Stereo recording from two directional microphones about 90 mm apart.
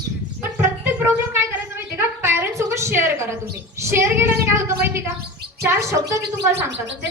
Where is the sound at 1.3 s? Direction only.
25° right (ahead or behind).